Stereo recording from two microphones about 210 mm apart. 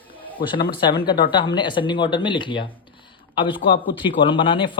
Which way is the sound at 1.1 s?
25° left (ahead or behind).